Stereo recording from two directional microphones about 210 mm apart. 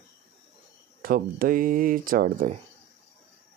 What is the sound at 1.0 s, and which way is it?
Speech, 40° right (ahead or behind).